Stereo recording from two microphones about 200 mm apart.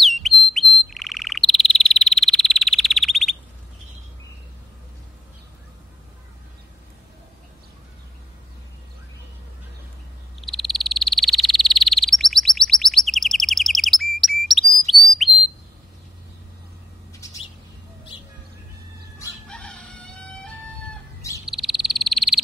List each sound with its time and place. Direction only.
0.0 s bird: centre (ahead or behind)
10.4 s frog: centre (ahead or behind)
14.9 s bird: centre (ahead or behind)
17.1 s bird: 15° left (ahead or behind)
19.4 s crowing: 5° left (ahead or behind)
21.5 s frog: centre (ahead or behind)